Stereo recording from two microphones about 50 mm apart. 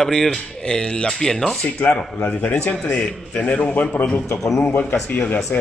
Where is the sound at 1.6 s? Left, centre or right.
Left.